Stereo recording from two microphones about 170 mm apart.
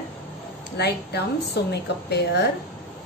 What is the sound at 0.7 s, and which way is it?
A woman's voice, 75° left (ahead or behind).